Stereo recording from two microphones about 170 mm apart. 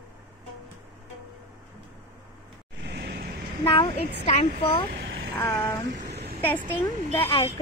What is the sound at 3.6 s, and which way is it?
Speech, 30° left (ahead or behind).